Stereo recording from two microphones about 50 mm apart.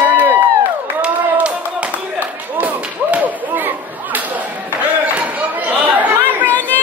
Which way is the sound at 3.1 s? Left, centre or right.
Right.